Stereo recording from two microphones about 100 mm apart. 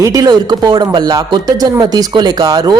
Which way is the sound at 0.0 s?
35° right (ahead or behind).